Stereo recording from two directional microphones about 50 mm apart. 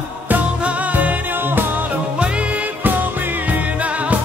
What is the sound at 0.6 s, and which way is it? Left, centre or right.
Music, right.